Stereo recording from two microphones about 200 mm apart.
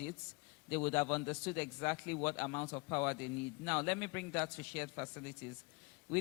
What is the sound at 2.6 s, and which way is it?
Speech, 25° left (ahead or behind).